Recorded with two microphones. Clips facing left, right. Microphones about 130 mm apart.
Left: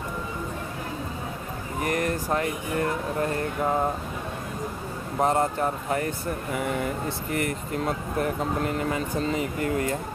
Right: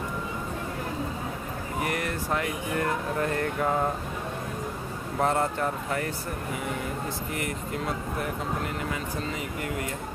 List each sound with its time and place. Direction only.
1.8 s air conditioning: 40° left (ahead or behind)
2.3 s speech: 25° left (ahead or behind)
5.2 s speech: 15° left (ahead or behind)
5.6 s speech: 30° left (ahead or behind)
7.3 s speech: 45° left (ahead or behind)